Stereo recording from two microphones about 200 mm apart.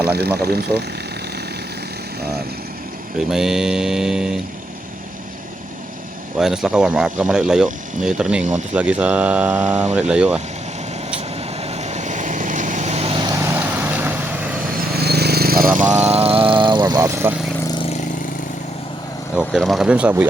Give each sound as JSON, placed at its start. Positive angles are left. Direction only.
{"t": 0.0, "sound": "speech", "side_deg": -55}
{"t": 3.2, "sound": "speech", "side_deg": 0}
{"t": 6.4, "sound": "speech", "side_deg": -5}
{"t": 11.6, "sound": "vehicle", "side_deg": -35}
{"t": 14.8, "sound": "vehicle", "side_deg": -55}
{"t": 16.0, "sound": "vehicle", "side_deg": -30}
{"t": 17.7, "sound": "vehicle", "side_deg": 25}
{"t": 19.4, "sound": "speech", "side_deg": 0}